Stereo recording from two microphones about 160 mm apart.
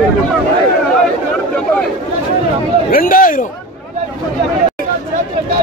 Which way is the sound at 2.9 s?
60° left (ahead or behind).